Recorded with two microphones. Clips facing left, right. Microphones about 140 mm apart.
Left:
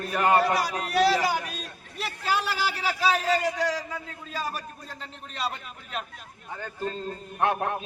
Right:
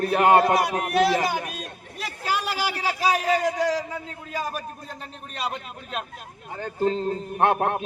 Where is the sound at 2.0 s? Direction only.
15° right (ahead or behind).